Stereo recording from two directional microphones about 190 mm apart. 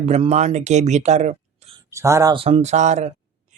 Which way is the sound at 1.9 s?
15° right (ahead or behind).